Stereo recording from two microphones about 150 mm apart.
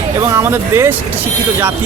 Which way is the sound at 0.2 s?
15° right (ahead or behind).